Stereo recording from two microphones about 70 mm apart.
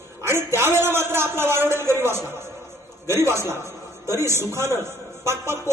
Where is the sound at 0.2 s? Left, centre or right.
Right.